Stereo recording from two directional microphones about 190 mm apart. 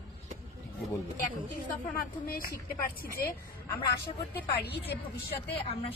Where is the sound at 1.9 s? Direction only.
50° left (ahead or behind).